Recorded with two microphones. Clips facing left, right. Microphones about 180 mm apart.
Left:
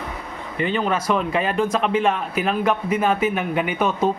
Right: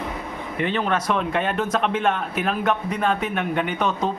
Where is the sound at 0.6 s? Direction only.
Centre (ahead or behind).